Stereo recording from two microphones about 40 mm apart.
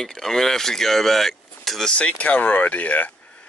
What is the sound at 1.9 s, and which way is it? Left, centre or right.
Speech, left.